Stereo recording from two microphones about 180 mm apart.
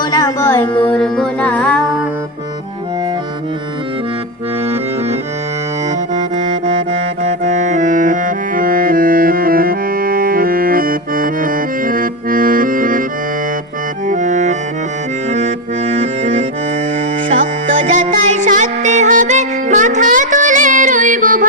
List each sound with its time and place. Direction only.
0.0 s music: 20° left (ahead or behind); by 2.0 s 5° left (ahead or behind)
6.1 s music: 40° right (ahead or behind)
14.1 s music: 45° right (ahead or behind)
15.3 s accordion: 40° right (ahead or behind)
17.3 s music: 45° right (ahead or behind)